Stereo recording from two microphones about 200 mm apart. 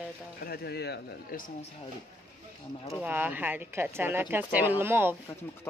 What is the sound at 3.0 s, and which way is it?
Speech, 10° right (ahead or behind).